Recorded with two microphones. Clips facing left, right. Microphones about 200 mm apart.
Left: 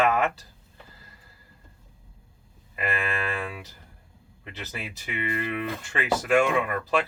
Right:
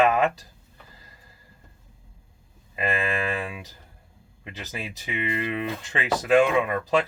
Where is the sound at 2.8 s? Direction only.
20° right (ahead or behind).